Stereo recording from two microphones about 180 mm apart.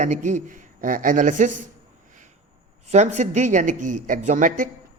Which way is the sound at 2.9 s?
40° right (ahead or behind).